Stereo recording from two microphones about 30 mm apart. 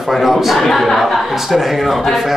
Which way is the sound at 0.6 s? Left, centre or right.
Centre.